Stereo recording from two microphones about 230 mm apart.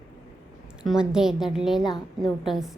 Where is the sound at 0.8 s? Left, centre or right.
Centre.